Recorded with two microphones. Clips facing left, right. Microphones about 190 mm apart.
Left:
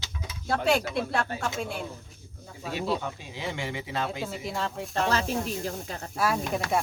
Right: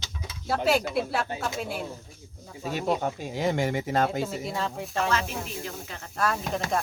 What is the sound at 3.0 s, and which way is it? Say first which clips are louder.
Speech: right 7 dB; 45° right (ahead or behind).